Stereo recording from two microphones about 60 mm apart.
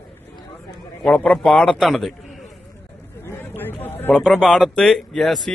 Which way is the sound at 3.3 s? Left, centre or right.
Left.